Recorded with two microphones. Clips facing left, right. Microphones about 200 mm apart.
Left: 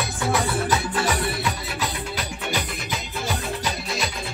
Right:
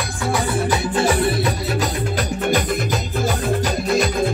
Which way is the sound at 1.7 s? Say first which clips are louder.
Right 7 dB; 45° right (ahead or behind).